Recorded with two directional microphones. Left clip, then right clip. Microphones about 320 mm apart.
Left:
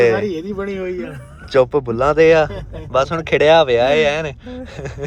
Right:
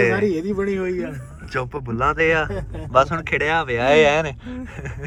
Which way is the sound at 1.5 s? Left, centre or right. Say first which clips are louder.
Left 12 dB; centre.